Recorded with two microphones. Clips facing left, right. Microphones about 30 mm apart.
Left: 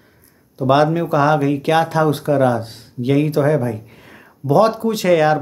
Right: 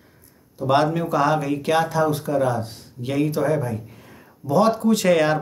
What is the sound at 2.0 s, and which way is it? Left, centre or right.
Speech, left.